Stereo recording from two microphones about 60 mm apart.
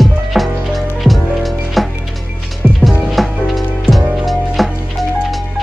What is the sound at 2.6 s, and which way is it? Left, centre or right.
Music, centre.